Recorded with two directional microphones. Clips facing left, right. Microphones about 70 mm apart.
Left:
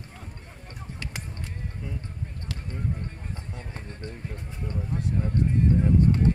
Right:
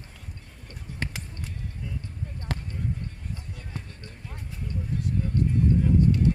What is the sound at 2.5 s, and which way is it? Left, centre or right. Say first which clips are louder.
Basketball bounce: right 7 dB; right.